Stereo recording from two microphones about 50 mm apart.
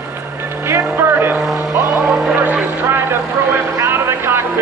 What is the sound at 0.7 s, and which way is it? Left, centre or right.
Vehicle, right.